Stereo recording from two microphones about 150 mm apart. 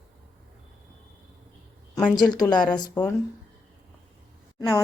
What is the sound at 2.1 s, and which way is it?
Speech, 30° left (ahead or behind).